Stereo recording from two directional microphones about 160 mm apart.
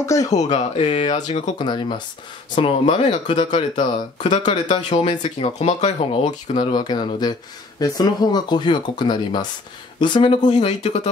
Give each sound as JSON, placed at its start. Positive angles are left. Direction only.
{"t": 0.0, "sound": "speech", "side_deg": 20}
{"t": 0.3, "sound": "speech", "side_deg": 45}
{"t": 0.8, "sound": "speech", "side_deg": 30}
{"t": 6.5, "sound": "speech", "side_deg": 30}